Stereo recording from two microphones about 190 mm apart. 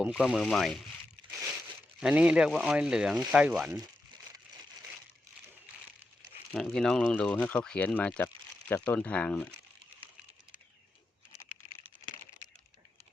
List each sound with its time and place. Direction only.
0.0 s speech: 5° right (ahead or behind)
2.0 s speech: 5° right (ahead or behind)
6.5 s speech: centre (ahead or behind)